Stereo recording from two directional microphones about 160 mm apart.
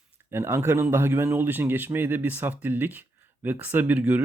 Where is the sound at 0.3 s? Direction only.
15° right (ahead or behind).